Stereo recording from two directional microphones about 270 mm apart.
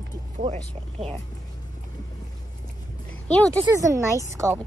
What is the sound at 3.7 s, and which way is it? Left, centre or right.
Speech, centre.